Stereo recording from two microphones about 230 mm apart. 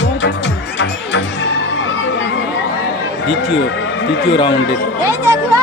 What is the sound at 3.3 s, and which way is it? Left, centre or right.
Music, left.